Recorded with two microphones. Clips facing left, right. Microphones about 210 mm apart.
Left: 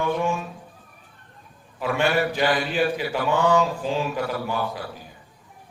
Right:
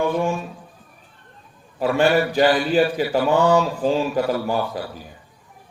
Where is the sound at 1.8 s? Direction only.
40° right (ahead or behind).